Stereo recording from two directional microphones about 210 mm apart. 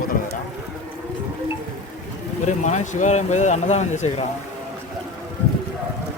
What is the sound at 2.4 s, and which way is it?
Speech, 35° left (ahead or behind).